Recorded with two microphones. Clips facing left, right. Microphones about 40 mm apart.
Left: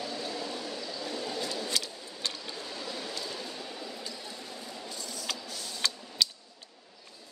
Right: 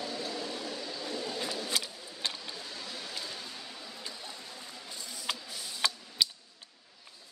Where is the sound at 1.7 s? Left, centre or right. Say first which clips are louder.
Left 1 dB; centre.